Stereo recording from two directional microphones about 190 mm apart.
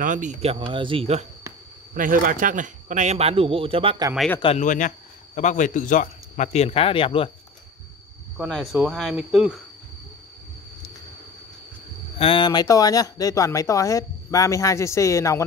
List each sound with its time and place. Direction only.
0.0 s speech: 40° right (ahead or behind)
2.0 s speech: 45° right (ahead or behind); by 4.1 s 30° right (ahead or behind)
4.4 s a man's voice: 35° left (ahead or behind)
8.7 s speech: 5° right (ahead or behind)
12.2 s speech: 25° left (ahead or behind)